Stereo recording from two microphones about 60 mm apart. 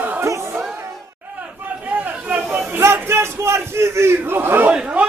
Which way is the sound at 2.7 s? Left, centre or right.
Right.